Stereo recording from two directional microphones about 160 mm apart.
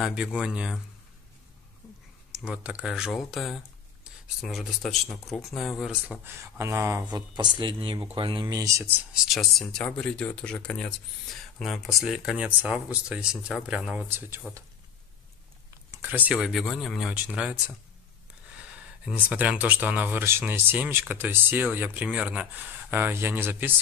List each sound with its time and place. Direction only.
0.0 s speech: 5° right (ahead or behind)
2.4 s speech: 5° right (ahead or behind)
6.4 s speech: 15° right (ahead or behind)
15.9 s a sound: 10° right (ahead or behind)
16.3 s speech: centre (ahead or behind)
19.2 s speech: 10° right (ahead or behind)